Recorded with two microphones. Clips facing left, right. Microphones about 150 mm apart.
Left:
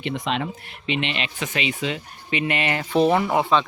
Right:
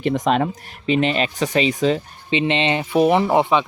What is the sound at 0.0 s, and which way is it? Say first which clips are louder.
Speech: right 7 dB; 45° right (ahead or behind).